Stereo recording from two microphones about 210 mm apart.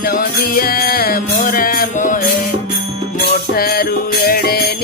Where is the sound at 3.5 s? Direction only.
45° left (ahead or behind).